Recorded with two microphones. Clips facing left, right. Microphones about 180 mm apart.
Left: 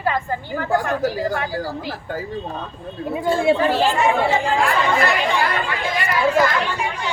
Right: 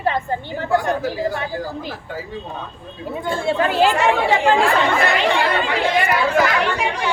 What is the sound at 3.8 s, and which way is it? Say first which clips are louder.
Speech: right 1 dB; 75° right (ahead or behind).